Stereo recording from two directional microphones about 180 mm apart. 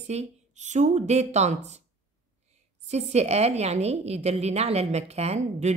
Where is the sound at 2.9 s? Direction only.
35° right (ahead or behind).